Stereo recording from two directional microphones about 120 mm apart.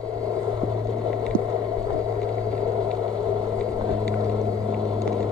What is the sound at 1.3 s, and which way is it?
Boat, 10° left (ahead or behind).